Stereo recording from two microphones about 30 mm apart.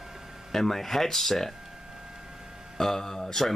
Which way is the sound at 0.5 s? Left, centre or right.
Centre.